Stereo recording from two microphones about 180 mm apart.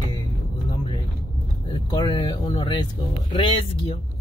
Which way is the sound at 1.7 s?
25° left (ahead or behind).